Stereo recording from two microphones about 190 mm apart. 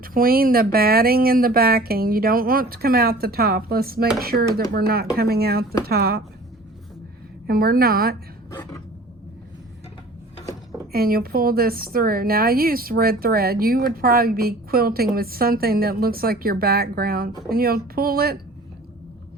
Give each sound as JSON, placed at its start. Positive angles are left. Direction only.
{"t": 0.0, "sound": "a woman's voice", "side_deg": -50}
{"t": 7.4, "sound": "speech", "side_deg": -50}
{"t": 8.4, "sound": "a sound", "side_deg": 15}
{"t": 10.9, "sound": "speech", "side_deg": -50}